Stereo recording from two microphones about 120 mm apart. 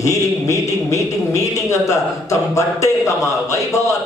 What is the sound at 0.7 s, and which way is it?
A man's voice, 25° left (ahead or behind).